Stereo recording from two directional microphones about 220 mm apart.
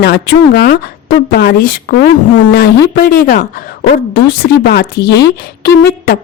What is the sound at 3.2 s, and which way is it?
Speech, 40° left (ahead or behind).